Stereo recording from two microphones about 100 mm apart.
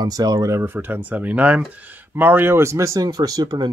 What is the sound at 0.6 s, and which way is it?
Speech, 20° right (ahead or behind).